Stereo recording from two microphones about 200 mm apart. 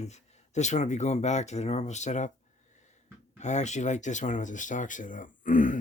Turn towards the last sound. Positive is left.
turn(degrees=40)  # may be behind; listen again after turning